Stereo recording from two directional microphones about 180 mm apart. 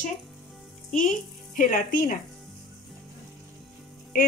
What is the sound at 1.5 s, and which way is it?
Speech, 45° left (ahead or behind).